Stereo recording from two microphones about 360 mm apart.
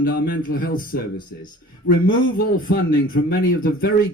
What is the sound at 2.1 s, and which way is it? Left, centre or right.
A man's voice, left.